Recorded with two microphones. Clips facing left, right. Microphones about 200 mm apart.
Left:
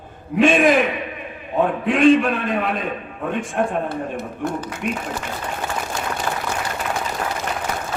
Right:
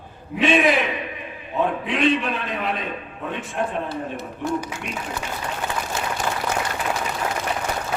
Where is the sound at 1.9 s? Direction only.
50° left (ahead or behind).